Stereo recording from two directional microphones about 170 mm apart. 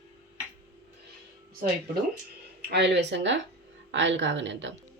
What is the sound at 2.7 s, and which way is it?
A woman's voice, 90° right.